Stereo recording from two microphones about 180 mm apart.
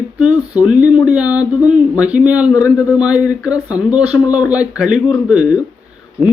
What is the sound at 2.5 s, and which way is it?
Speech, 20° left (ahead or behind).